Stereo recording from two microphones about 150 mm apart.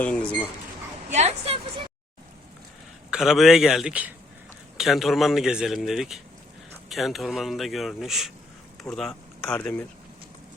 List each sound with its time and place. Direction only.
0.0 s speech: 5° left (ahead or behind)
1.1 s a woman's voice: 45° right (ahead or behind)
3.1 s a man's voice: centre (ahead or behind)